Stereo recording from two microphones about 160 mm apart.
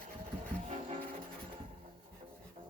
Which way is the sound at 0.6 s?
40° right (ahead or behind).